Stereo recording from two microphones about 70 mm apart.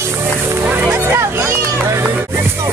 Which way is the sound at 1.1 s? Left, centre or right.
Right.